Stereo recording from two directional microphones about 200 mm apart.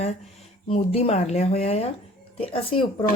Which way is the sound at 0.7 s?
30° left (ahead or behind).